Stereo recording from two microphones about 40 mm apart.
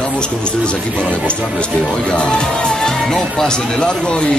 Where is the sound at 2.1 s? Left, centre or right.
Left.